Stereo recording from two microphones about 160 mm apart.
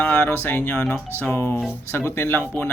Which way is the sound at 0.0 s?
10° left (ahead or behind).